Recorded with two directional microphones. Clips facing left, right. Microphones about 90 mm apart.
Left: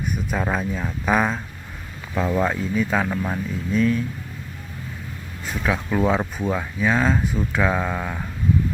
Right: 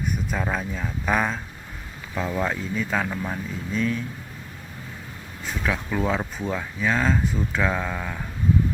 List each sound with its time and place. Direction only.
0.3 s speech: 15° left (ahead or behind)
3.8 s speech: centre (ahead or behind)
5.6 s speech: 20° left (ahead or behind)